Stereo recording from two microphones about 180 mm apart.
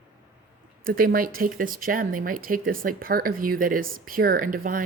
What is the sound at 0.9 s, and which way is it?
Speech, 50° right (ahead or behind).